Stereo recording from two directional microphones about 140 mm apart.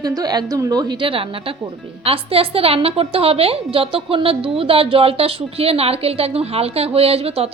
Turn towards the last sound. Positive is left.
turn(degrees=-45)  # may be behind; listen again after turning